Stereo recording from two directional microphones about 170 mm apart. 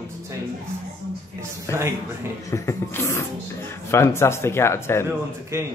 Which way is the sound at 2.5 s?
15° left (ahead or behind).